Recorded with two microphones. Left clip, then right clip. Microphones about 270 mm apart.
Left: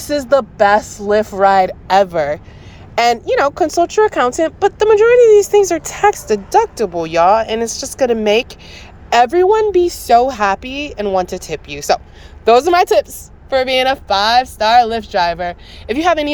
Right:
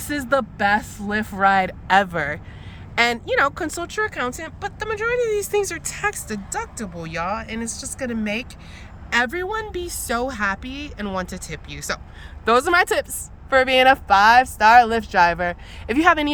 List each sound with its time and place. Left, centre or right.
0.3 s a woman's voice: centre
7.9 s speech: left
8.7 s a woman's voice: centre